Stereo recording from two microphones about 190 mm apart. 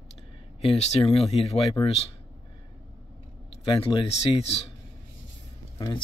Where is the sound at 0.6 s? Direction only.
30° left (ahead or behind).